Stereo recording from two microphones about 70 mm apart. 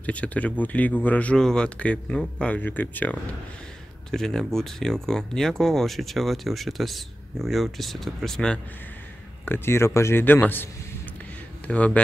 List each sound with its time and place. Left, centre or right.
0.0 s speech: centre
1.4 s speech: centre
4.1 s speech: centre
9.5 s speech: left
10.2 s speech: left
11.6 s speech: centre